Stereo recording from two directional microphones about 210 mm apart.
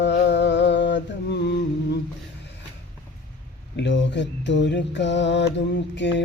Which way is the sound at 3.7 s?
55° left (ahead or behind).